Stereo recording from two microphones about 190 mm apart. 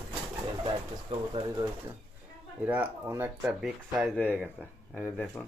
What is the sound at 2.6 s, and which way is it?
Speech, 10° right (ahead or behind).